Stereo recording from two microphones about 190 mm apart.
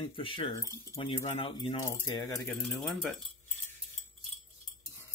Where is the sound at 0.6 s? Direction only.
15° left (ahead or behind).